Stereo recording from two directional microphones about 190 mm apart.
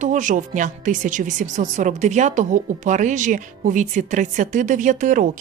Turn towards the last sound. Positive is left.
turn(degrees=-45)  # may be behind; listen again after turning